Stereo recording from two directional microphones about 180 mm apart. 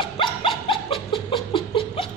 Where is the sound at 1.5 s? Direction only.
30° left (ahead or behind).